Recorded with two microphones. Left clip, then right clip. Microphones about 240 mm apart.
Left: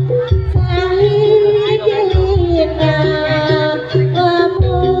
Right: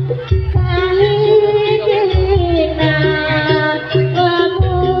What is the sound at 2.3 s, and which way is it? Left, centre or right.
Music, left.